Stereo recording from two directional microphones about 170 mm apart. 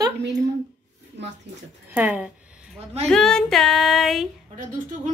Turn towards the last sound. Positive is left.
turn(degrees=-50)  # may be behind; listen again after turning